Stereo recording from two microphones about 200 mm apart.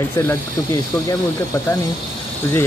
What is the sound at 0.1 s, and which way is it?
Speech, 10° left (ahead or behind).